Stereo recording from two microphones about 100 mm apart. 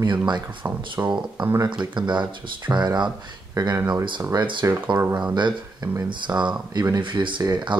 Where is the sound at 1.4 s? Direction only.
50° right (ahead or behind).